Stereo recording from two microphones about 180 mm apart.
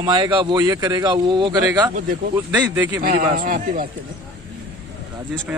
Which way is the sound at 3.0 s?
50° right (ahead or behind).